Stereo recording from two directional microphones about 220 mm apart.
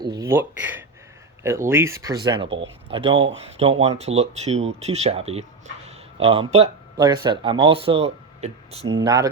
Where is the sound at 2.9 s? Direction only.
25° right (ahead or behind).